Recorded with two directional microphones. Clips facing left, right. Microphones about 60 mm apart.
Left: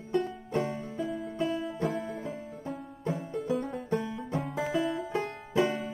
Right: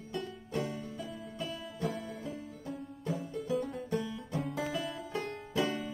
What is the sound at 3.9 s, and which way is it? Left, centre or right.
Banjo, left.